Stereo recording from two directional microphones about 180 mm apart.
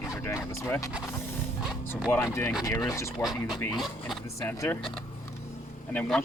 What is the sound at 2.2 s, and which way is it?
Speech, 15° left (ahead or behind).